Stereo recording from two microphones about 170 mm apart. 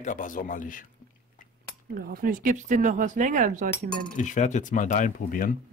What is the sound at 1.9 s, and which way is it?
Speech, 60° right (ahead or behind).